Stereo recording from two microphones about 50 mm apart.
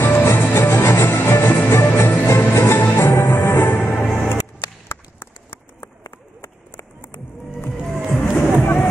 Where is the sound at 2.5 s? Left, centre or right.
Left.